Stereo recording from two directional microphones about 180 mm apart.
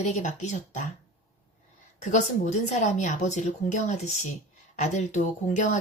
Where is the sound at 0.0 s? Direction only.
40° left (ahead or behind).